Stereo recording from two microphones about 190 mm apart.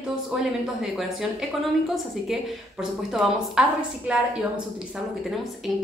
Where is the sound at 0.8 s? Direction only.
Centre (ahead or behind).